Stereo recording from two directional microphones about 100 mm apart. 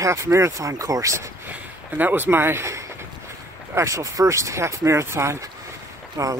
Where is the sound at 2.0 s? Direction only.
20° right (ahead or behind).